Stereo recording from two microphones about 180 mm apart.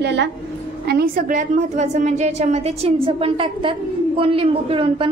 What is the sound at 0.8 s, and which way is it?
A woman's voice, 60° right (ahead or behind).